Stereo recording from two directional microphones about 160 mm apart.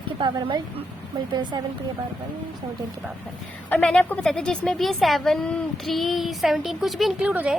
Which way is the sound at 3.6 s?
5° left (ahead or behind).